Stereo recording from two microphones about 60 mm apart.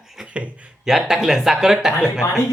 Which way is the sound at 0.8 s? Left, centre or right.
Centre.